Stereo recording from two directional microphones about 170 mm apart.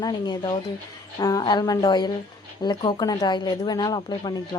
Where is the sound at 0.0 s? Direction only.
25° left (ahead or behind).